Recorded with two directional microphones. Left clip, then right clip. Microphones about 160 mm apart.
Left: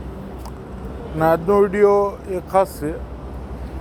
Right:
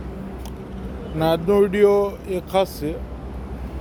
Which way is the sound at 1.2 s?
Centre (ahead or behind).